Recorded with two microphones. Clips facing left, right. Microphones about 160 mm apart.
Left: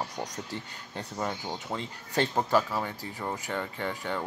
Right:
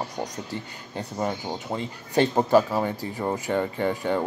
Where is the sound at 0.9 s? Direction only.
15° right (ahead or behind).